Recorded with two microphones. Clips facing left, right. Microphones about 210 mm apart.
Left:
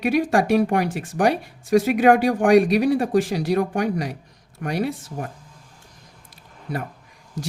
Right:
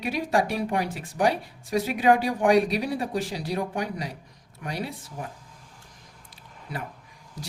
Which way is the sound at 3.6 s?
75° left (ahead or behind).